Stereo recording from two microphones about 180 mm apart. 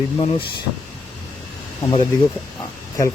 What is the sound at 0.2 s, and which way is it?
Speech, 30° left (ahead or behind).